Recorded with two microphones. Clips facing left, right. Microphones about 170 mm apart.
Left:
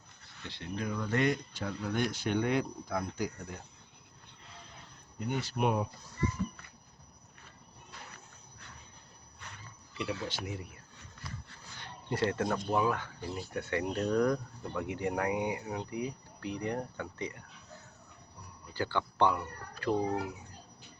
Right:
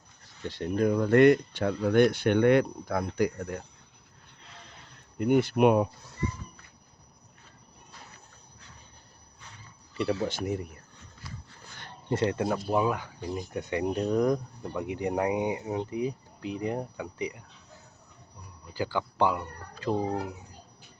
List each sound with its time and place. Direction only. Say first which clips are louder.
0.4 s speech: right 11 dB; 45° right (ahead or behind); by 3.6 s 70° right (ahead or behind)
4.4 s a sound: right 2 dB; 80° right
5.1 s speech: right 11 dB; 60° right (ahead or behind)
10.0 s speech: right 8 dB; 40° right (ahead or behind)
12.1 s speech: right 4 dB; 20° right (ahead or behind)
12.5 s speech: right 4 dB; 5° right (ahead or behind)
12.7 s speech: right 3 dB; 15° right (ahead or behind)
18.7 s speech: right 3 dB; 10° right (ahead or behind)